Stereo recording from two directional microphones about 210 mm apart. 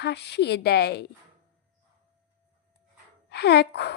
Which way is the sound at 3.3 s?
50° left (ahead or behind).